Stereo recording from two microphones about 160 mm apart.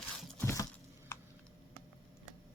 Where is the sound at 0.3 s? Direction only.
20° left (ahead or behind).